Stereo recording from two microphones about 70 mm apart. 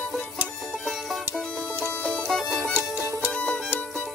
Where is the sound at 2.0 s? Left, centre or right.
Centre.